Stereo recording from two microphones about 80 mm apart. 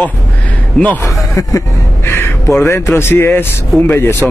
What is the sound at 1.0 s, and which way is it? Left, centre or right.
Speech, left.